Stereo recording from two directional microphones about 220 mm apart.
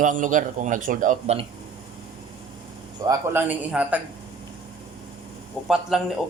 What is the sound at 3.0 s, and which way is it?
Speech, 15° right (ahead or behind).